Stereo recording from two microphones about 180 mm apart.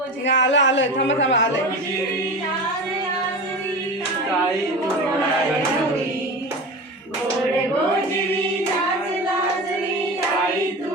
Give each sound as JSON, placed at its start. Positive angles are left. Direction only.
{"t": 0.3, "sound": "speech", "side_deg": 85}